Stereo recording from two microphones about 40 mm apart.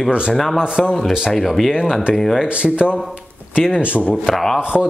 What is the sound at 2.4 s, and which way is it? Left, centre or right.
Speech, right.